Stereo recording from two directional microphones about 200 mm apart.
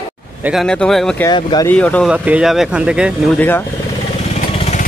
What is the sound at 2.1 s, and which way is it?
Speech, 5° right (ahead or behind).